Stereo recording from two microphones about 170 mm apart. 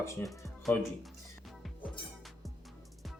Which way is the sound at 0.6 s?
Centre (ahead or behind).